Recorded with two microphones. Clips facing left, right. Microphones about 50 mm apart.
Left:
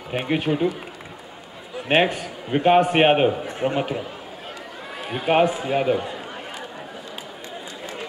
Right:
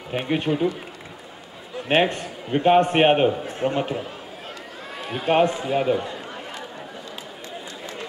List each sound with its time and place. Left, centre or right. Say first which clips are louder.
0.1 s a man's voice: left 1 dB; centre
1.9 s a man's voice: left 1 dB; centre